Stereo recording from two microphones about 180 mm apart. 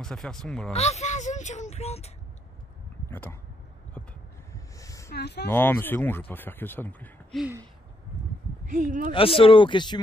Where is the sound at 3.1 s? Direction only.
10° left (ahead or behind).